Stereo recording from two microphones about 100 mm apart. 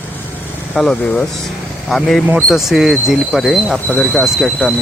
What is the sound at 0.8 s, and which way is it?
Speech, 5° left (ahead or behind).